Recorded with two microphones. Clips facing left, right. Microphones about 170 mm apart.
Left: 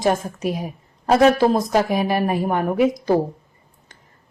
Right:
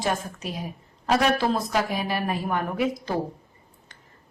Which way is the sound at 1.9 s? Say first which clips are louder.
Left 8 dB; 15° left (ahead or behind).